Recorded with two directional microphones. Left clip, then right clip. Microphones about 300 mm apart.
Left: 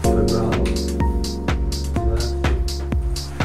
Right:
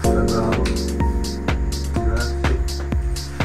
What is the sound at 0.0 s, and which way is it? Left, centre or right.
Music, centre.